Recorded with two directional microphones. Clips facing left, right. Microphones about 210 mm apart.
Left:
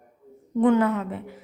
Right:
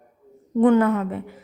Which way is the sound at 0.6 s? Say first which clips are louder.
Right 3 dB; 50° right (ahead or behind).